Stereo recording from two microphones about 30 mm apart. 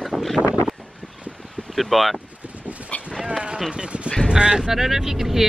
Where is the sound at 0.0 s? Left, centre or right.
Centre.